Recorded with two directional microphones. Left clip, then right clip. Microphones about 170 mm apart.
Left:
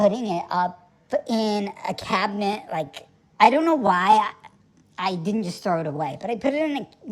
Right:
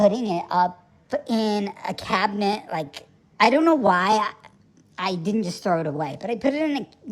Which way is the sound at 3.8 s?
35° right (ahead or behind).